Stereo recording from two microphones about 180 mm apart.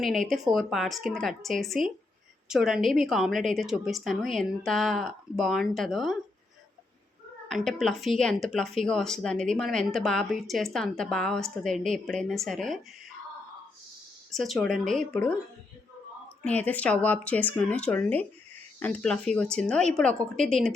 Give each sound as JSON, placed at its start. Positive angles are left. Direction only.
{"t": 0.3, "sound": "speech", "side_deg": 0}
{"t": 7.4, "sound": "speech", "side_deg": 0}
{"t": 14.3, "sound": "speech", "side_deg": 0}
{"t": 16.4, "sound": "speech", "side_deg": 10}